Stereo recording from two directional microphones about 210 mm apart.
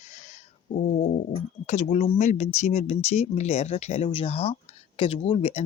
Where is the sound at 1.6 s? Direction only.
30° left (ahead or behind).